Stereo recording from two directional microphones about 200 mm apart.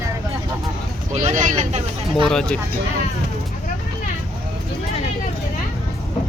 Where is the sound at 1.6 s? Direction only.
25° right (ahead or behind).